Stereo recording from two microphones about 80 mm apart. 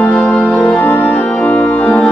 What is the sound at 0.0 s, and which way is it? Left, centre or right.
Music, centre.